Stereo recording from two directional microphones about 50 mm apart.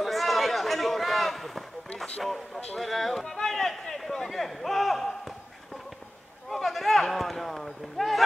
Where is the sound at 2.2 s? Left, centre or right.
Centre.